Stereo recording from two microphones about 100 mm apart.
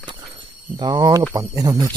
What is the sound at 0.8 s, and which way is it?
Speech, 45° right (ahead or behind).